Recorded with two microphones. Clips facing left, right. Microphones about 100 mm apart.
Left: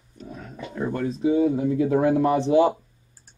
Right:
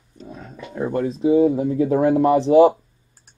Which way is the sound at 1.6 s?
35° right (ahead or behind).